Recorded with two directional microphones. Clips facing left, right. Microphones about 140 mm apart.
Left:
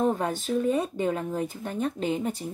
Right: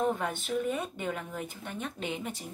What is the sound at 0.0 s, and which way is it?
Speech, 35° left (ahead or behind).